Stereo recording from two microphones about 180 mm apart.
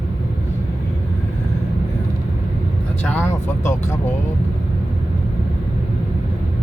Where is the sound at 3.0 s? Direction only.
10° left (ahead or behind).